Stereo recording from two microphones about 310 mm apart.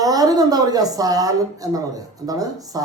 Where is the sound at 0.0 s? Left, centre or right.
Centre.